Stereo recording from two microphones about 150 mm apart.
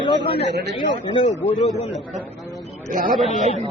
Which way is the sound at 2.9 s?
70° right (ahead or behind).